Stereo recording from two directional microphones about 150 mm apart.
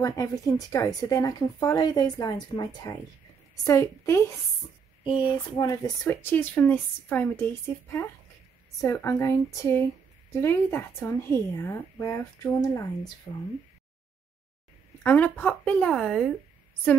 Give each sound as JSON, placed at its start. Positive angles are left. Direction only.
{"t": 0.0, "sound": "speech", "side_deg": 20}
{"t": 6.0, "sound": "speech", "side_deg": 15}
{"t": 8.8, "sound": "speech", "side_deg": 20}
{"t": 15.0, "sound": "speech", "side_deg": 10}